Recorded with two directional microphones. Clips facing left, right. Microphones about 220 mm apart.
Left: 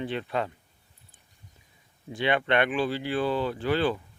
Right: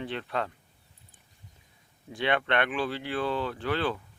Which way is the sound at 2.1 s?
Centre (ahead or behind).